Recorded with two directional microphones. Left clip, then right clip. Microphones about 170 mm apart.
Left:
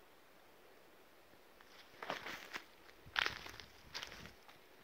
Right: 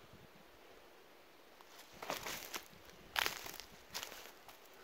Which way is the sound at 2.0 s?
5° right (ahead or behind).